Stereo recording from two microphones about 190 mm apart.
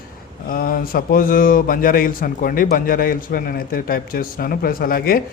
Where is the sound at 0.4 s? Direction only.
50° left (ahead or behind).